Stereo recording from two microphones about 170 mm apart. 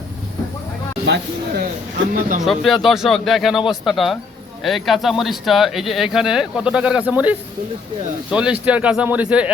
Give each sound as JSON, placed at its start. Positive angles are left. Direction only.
{"t": 1.0, "sound": "speech", "side_deg": -90}
{"t": 2.4, "sound": "speech", "side_deg": 0}